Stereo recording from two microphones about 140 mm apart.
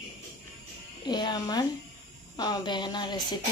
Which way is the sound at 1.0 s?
30° left (ahead or behind).